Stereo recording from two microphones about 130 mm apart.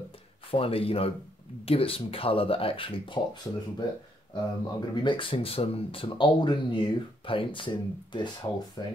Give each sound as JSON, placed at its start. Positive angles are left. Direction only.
{"t": 0.5, "sound": "speech", "side_deg": 45}
{"t": 4.3, "sound": "speech", "side_deg": 40}